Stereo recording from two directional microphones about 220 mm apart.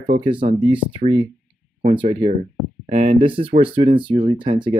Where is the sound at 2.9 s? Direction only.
30° right (ahead or behind).